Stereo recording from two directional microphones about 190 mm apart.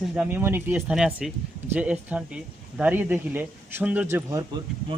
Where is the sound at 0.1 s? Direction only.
10° right (ahead or behind).